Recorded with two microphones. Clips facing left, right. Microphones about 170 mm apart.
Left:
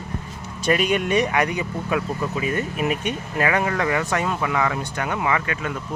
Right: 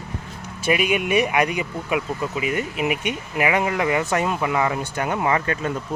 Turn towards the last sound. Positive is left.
turn(degrees=-35)  # may be behind; listen again after turning